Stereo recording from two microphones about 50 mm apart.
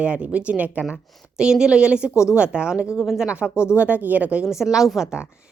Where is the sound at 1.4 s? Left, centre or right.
Centre.